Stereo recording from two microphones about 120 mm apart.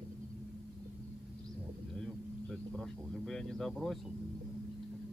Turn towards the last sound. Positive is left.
turn(degrees=5)  # may be behind; listen again after turning